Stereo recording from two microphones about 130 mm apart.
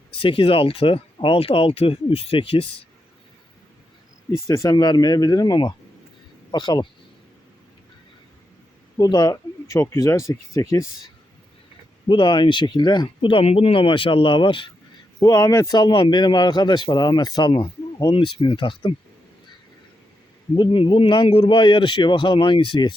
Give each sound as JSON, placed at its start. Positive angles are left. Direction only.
{"t": 0.2, "sound": "speech", "side_deg": 45}
{"t": 4.3, "sound": "speech", "side_deg": 25}
{"t": 9.0, "sound": "speech", "side_deg": 30}
{"t": 12.0, "sound": "speech", "side_deg": 40}
{"t": 15.2, "sound": "speech", "side_deg": 25}
{"t": 20.6, "sound": "speech", "side_deg": 40}